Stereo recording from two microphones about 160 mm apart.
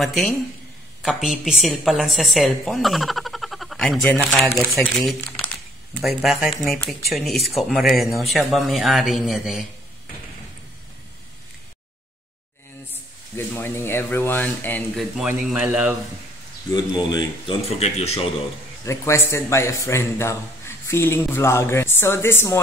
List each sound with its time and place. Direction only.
0.0 s a woman's voice: centre (ahead or behind)
4.7 s a woman's voice: centre (ahead or behind)
13.6 s a man's voice: 15° left (ahead or behind)
15.0 s speech: 5° right (ahead or behind)
17.1 s speech: 25° left (ahead or behind)
17.7 s speech: 40° left (ahead or behind)
18.9 s a man's voice: 15° left (ahead or behind)